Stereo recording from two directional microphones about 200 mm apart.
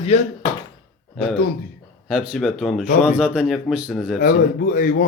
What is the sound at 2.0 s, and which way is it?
Speech, 5° right (ahead or behind).